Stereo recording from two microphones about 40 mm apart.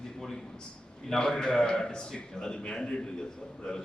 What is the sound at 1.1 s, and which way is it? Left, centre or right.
A man's voice, centre.